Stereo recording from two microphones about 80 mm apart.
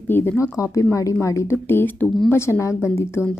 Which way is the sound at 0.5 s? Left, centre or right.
Left.